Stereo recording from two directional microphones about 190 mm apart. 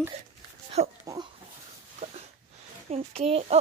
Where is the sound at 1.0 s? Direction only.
20° right (ahead or behind).